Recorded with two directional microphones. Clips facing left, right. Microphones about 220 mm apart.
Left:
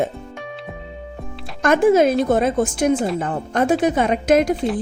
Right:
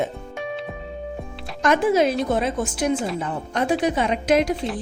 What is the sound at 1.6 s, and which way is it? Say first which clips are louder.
A woman's voice: left 4 dB; 50° left (ahead or behind).